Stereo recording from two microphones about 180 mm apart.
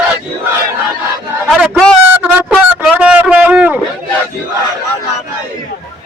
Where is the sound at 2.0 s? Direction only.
10° right (ahead or behind).